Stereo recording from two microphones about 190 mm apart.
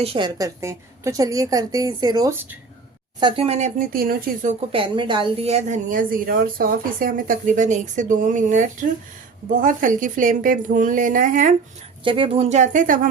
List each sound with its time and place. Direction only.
0.0 s a woman's voice: 25° right (ahead or behind); by 2.6 s 10° right (ahead or behind)
3.2 s a woman's voice: 25° right (ahead or behind)
3.8 s a woman's voice: 50° right (ahead or behind)
4.7 s a woman's voice: 25° right (ahead or behind); by 11.5 s 45° right (ahead or behind)
12.0 s a woman's voice: 30° right (ahead or behind); by 13.1 s 45° right (ahead or behind)